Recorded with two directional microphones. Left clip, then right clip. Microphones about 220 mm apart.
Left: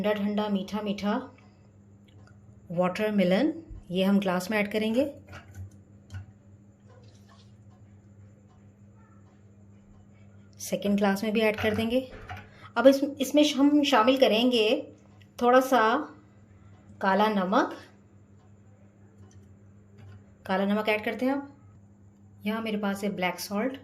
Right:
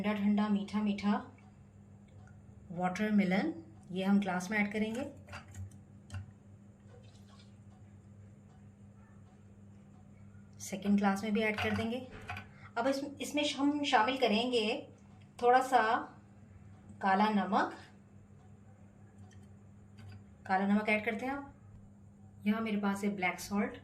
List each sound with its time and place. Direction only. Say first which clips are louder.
0.0 s speech: left 7 dB; 45° left (ahead or behind)
2.7 s a woman's voice: left 8 dB; 35° left (ahead or behind)
10.7 s a woman's voice: left 7 dB; 40° left (ahead or behind)
17.0 s speech: left 6 dB; 50° left (ahead or behind)
20.4 s a woman's voice: left 5 dB; 45° left (ahead or behind)
22.8 s a woman's voice: left 5 dB; 40° left (ahead or behind)